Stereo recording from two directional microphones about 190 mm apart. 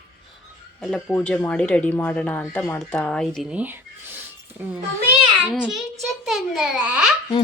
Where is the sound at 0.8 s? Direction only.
5° left (ahead or behind).